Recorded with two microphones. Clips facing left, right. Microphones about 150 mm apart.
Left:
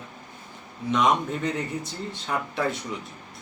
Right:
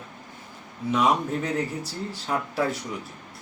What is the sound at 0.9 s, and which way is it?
Speech, 5° right (ahead or behind).